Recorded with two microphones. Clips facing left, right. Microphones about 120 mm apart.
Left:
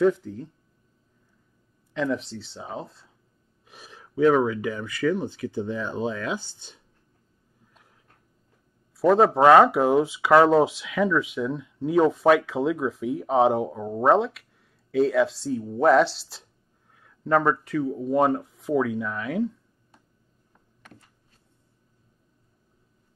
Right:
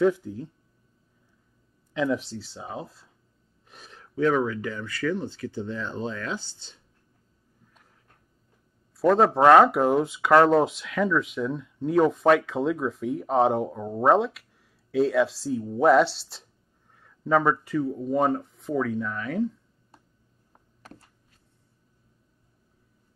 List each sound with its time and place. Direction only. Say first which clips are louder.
0.0 s speech: left 1 dB; 5° right (ahead or behind)
2.0 s speech: right 1 dB; 5° right (ahead or behind); by 6.8 s 15° left (ahead or behind)
8.9 s speech: left 1 dB; centre (ahead or behind)
20.8 s a sound: right 3 dB; 35° right (ahead or behind)